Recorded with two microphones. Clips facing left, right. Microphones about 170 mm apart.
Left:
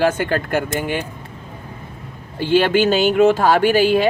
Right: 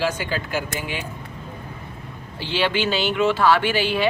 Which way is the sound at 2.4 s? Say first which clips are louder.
Left 8 dB; 50° left (ahead or behind).